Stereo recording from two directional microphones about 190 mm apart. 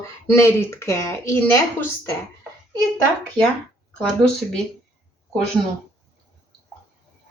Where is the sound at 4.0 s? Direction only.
5° left (ahead or behind).